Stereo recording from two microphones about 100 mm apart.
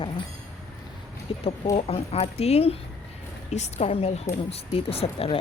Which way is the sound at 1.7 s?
85° left.